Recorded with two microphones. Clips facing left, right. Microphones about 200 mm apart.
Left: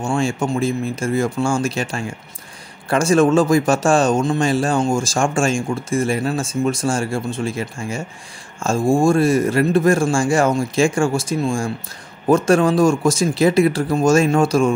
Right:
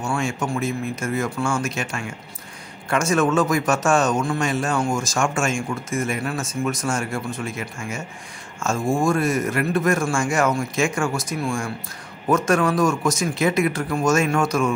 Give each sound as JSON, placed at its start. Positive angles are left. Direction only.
{"t": 0.0, "sound": "a man's voice", "side_deg": 30}